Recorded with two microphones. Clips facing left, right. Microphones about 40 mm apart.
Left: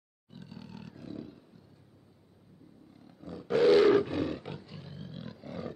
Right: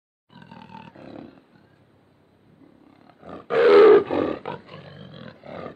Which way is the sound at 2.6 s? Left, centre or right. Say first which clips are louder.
Right 5 dB; right.